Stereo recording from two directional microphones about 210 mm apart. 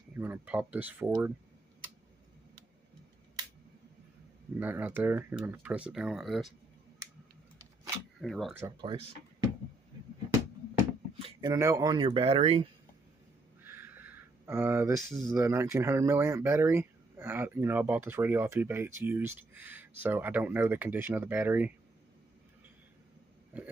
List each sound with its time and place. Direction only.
0.1 s speech: 10° right (ahead or behind)
4.6 s speech: 10° right (ahead or behind)
8.2 s speech: centre (ahead or behind)
8.5 s speech: 15° right (ahead or behind)
11.1 s a sound: 25° right (ahead or behind)
11.5 s speech: 15° right (ahead or behind)
13.6 s a sound: 10° right (ahead or behind)
15.2 s speech: 15° right (ahead or behind)
23.5 s a sound: 5° right (ahead or behind)